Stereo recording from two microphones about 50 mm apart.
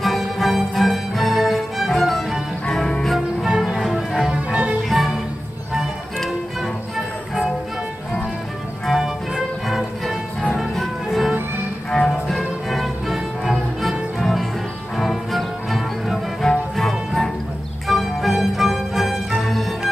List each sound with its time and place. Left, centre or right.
0.0 s music: centre
3.4 s music: centre
4.3 s music: right
4.8 s music: centre
8.9 s music: centre
11.9 s music: centre